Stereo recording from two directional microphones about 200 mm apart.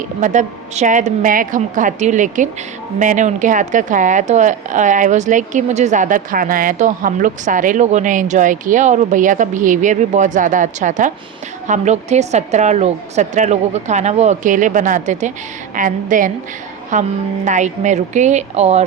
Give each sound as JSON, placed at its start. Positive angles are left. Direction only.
{"t": 0.2, "sound": "a woman's voice", "side_deg": -35}